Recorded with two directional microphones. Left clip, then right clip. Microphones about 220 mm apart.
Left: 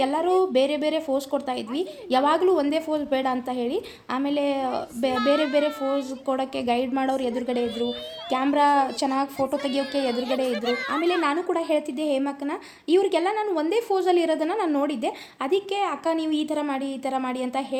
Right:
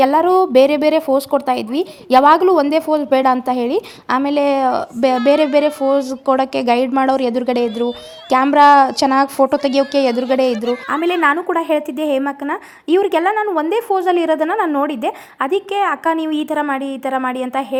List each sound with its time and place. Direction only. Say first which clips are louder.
0.0 s a woman's voice: right 10 dB; 30° right (ahead or behind)